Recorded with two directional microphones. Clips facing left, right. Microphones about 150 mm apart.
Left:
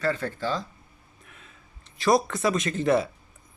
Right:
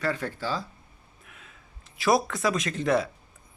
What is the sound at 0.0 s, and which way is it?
Speech, 10° right (ahead or behind).